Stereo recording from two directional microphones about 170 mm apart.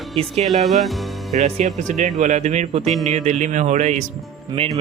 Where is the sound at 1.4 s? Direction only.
40° right (ahead or behind).